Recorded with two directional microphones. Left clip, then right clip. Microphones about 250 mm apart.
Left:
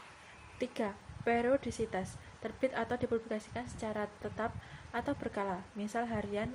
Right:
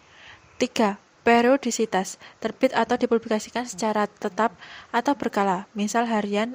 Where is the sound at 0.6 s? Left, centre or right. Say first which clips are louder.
Right 14 dB; right.